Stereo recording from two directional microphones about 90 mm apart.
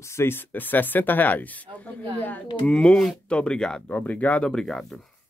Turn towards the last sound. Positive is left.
turn(degrees=5)  # may be behind; listen again after turning